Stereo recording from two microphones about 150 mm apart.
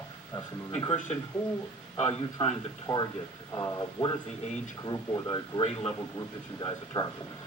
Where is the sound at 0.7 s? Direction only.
35° left (ahead or behind).